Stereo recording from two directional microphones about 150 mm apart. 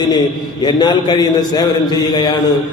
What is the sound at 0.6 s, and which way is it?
Mantra, 30° left (ahead or behind).